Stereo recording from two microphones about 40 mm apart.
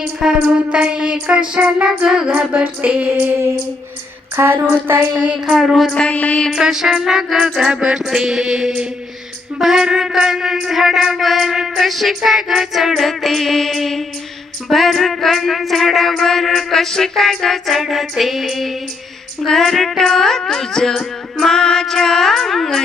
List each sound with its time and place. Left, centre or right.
0.2 s music: centre
0.7 s music: right
2.2 s female singing: right
4.4 s a sound: right
4.7 s a sound: right
5.5 s music: centre
5.9 s music: left
6.1 s a sound: left
6.6 s a man's voice: centre
9.6 s music: centre